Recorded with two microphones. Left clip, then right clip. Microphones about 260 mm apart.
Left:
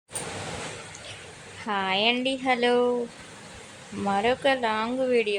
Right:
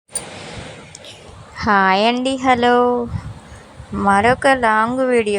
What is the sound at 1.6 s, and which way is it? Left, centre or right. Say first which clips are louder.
A woman's voice: right 11 dB; right.